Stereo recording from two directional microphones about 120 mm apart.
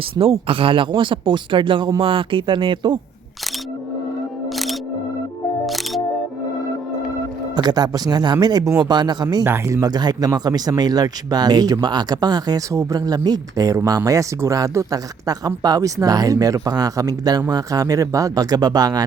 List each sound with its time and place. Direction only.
0.2 s speech: 50° right (ahead or behind)
4.4 s music: centre (ahead or behind)
7.5 s speech: 35° right (ahead or behind)
9.4 s speech: 20° right (ahead or behind)